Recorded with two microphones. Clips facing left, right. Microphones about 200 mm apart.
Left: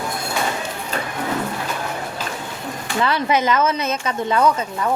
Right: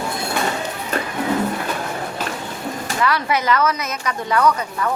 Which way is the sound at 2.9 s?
25° left (ahead or behind).